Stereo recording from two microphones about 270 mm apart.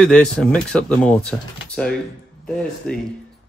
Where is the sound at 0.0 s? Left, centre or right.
Centre.